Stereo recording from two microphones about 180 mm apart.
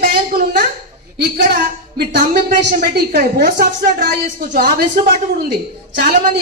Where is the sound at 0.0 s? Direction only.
60° right (ahead or behind).